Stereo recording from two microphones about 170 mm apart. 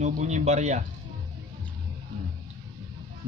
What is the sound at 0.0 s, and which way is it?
Speech, 45° right (ahead or behind).